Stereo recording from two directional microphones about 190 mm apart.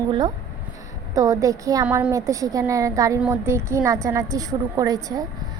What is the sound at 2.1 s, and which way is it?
A woman's voice, 15° right (ahead or behind).